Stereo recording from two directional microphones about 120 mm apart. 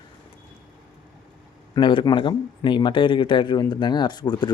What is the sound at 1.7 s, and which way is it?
Speech, 40° left (ahead or behind).